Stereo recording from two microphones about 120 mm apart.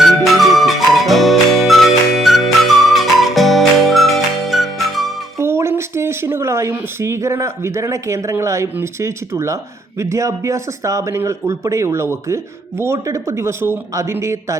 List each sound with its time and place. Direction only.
0.3 s music: centre (ahead or behind)
5.4 s a sound: 20° right (ahead or behind)
8.7 s speech: 20° right (ahead or behind)